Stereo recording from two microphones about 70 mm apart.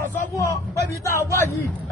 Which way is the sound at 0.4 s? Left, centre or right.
Left.